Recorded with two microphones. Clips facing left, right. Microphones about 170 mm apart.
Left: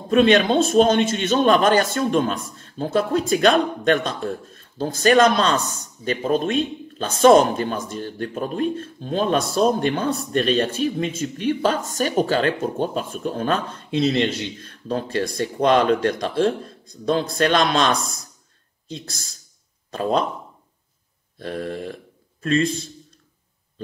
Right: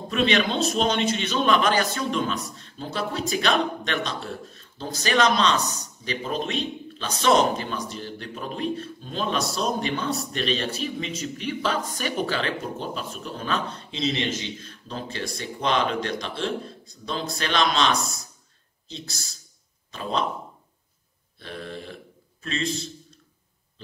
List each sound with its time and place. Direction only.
0.1 s a man's voice: 50° left (ahead or behind)
19.9 s a man's voice: 50° left (ahead or behind)
21.4 s a man's voice: 45° left (ahead or behind)